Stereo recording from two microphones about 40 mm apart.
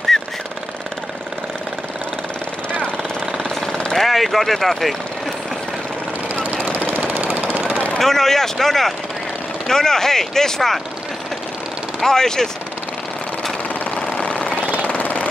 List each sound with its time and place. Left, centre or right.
0.1 s jackhammer: centre
3.9 s speech: centre
6.3 s vehicle: right
6.9 s jackhammer: right
7.2 s vehicle: right
8.0 s speech: centre
12.0 s speech: centre
14.2 s jackhammer: left
14.6 s jackhammer: right
14.9 s jackhammer: left